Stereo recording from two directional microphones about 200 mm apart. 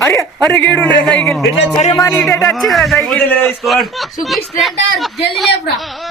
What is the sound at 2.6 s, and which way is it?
A man's voice, centre (ahead or behind).